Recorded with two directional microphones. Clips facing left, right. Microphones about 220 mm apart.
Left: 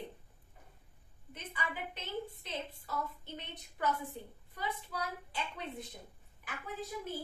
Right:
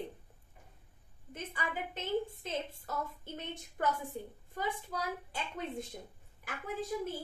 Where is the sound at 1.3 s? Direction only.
45° right (ahead or behind).